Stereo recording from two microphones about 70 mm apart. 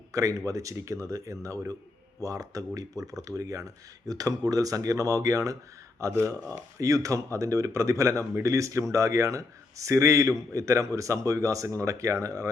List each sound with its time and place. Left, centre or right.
0.1 s speech: right